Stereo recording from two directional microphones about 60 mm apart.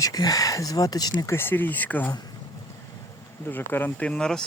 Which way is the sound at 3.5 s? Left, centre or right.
Left.